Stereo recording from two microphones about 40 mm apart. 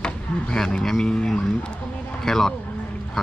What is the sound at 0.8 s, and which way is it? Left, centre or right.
Speech, centre.